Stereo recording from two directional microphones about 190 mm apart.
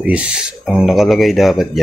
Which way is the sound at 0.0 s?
5° right (ahead or behind).